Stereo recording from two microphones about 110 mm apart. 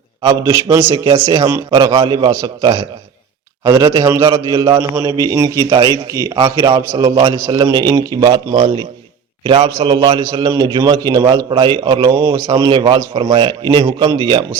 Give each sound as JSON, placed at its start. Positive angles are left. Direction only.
{"t": 0.2, "sound": "a man's voice", "side_deg": -45}
{"t": 0.5, "sound": "a man's voice", "side_deg": -25}
{"t": 0.9, "sound": "a man's voice", "side_deg": -45}
{"t": 12.8, "sound": "a man's voice", "side_deg": -50}